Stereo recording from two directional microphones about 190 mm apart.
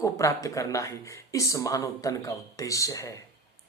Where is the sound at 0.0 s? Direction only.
15° left (ahead or behind).